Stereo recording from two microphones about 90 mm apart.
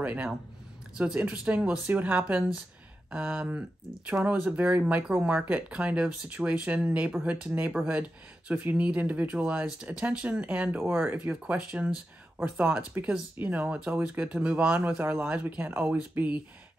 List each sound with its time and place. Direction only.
0.0 s speech: 15° right (ahead or behind)